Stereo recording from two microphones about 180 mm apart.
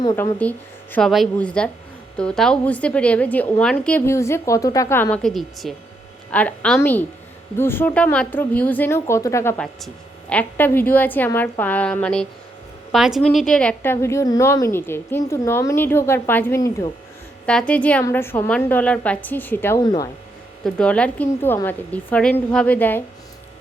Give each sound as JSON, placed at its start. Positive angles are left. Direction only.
{"t": 0.0, "sound": "speech", "side_deg": 20}
{"t": 0.9, "sound": "a woman's voice", "side_deg": 0}
{"t": 17.4, "sound": "a woman's voice", "side_deg": 5}
{"t": 19.8, "sound": "speech", "side_deg": 25}
{"t": 20.7, "sound": "a woman's voice", "side_deg": 5}